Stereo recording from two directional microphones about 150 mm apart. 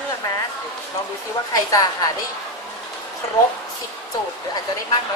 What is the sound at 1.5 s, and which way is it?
Speech, 25° left (ahead or behind).